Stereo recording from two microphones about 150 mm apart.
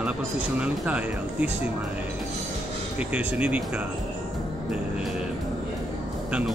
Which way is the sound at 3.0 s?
10° right (ahead or behind).